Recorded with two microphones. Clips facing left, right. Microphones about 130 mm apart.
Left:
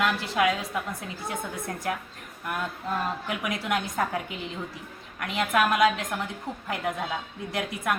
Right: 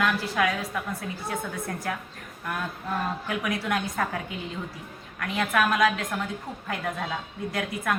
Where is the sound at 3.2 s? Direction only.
15° left (ahead or behind).